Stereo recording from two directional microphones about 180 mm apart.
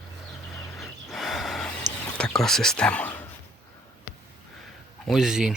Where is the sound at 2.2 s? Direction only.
5° left (ahead or behind).